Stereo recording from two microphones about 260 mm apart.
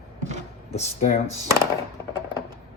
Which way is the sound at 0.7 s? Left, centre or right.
Left.